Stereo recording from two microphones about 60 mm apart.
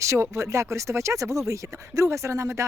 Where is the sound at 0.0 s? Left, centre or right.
Right.